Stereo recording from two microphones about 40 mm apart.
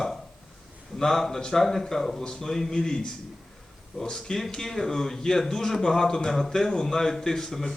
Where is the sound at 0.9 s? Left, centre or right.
Centre.